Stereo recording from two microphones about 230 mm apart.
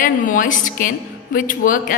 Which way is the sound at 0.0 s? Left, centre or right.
Left.